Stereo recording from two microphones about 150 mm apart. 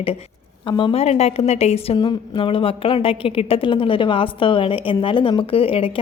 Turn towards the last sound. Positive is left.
turn(degrees=40)  # may be behind; listen again after turning